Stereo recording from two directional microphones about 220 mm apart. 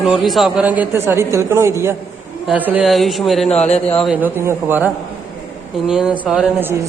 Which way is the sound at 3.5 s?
30° left (ahead or behind).